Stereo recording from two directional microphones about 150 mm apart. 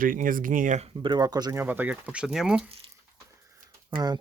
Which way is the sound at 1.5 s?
15° right (ahead or behind).